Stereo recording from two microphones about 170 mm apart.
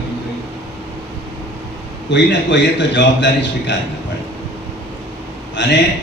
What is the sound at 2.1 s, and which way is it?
A man's voice, 90° left.